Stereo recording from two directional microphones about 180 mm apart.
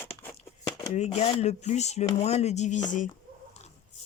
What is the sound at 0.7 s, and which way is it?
Speech, 35° left (ahead or behind).